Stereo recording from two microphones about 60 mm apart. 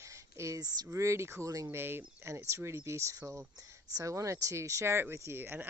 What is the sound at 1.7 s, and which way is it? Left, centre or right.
Speech, right.